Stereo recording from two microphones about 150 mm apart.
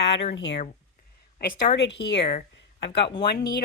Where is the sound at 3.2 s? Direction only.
90° left.